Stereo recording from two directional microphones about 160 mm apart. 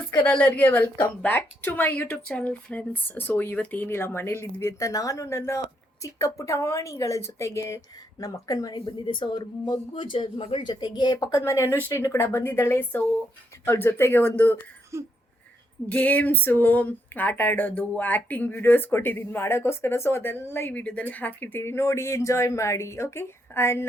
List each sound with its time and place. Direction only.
0.3 s a woman's voice: 10° left (ahead or behind)
14.9 s a sound: 20° right (ahead or behind)
15.9 s speech: 10° left (ahead or behind)